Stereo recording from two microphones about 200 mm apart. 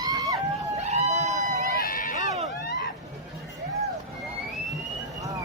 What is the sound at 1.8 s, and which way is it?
Run, 45° left (ahead or behind).